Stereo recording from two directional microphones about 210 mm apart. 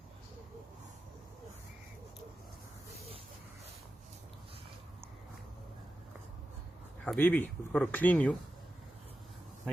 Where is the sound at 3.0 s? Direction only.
30° right (ahead or behind).